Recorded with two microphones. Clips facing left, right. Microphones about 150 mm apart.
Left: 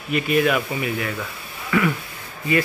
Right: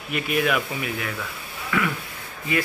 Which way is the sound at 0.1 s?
Centre (ahead or behind).